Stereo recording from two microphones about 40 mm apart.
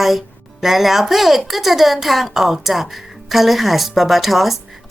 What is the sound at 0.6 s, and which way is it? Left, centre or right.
A woman's voice, centre.